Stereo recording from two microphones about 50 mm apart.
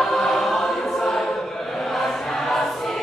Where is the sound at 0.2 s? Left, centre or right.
Centre.